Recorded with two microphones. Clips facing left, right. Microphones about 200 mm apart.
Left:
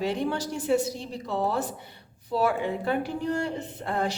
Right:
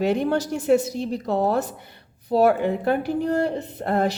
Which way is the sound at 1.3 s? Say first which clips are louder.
Right 4 dB; 45° right (ahead or behind).